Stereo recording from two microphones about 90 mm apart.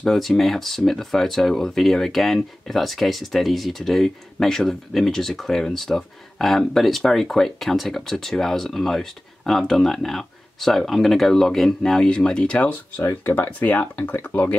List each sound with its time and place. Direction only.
0.0 s speech: 5° left (ahead or behind)
13.0 s speech: 25° left (ahead or behind)